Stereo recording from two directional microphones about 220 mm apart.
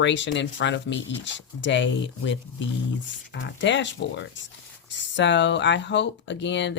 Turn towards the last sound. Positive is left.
turn(degrees=55)  # may be behind; listen again after turning